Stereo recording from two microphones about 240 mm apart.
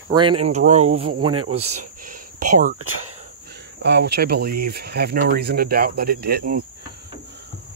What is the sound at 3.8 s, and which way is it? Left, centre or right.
Speech, right.